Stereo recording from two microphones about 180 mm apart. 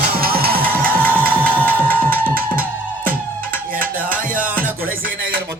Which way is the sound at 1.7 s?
10° left (ahead or behind).